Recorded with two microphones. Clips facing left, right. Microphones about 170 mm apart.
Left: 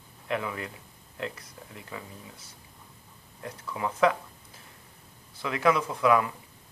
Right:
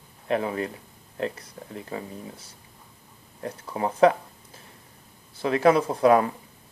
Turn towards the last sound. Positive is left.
turn(degrees=-40)  # may be behind; listen again after turning